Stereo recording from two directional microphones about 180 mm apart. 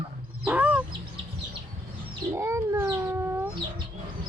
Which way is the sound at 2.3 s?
15° right (ahead or behind).